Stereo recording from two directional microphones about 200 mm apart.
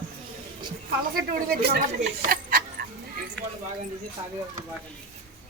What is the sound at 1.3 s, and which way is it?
Speech, 50° right (ahead or behind).